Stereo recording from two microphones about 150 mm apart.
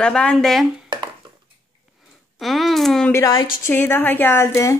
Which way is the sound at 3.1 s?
20° left (ahead or behind).